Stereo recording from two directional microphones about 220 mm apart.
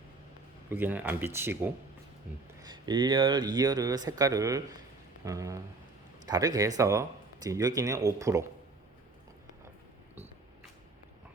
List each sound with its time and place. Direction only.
0.7 s speech: 10° right (ahead or behind)